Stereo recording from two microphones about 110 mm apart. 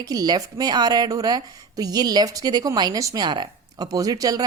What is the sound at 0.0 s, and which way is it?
A woman's voice, 35° right (ahead or behind).